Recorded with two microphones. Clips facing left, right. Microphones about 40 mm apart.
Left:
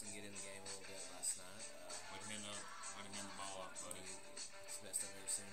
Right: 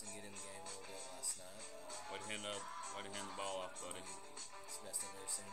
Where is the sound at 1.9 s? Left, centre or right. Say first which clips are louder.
Right 6 dB; right.